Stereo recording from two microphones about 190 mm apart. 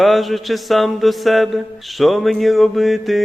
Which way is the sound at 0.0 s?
Centre (ahead or behind).